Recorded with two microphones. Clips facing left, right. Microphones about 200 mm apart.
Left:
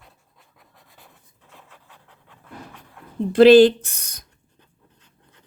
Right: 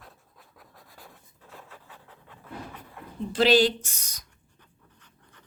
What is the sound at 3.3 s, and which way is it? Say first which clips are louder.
Speech: left 11 dB; 55° left (ahead or behind).